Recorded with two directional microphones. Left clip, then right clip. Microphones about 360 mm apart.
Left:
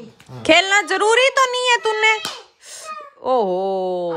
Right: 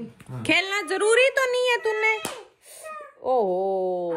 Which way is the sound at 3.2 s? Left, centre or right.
Left.